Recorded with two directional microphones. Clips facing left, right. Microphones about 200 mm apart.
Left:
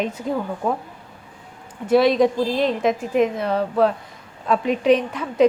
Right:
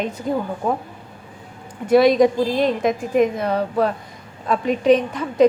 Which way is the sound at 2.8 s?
5° left (ahead or behind).